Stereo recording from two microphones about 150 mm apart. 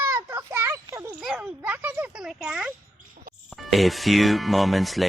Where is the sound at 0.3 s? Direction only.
15° right (ahead or behind).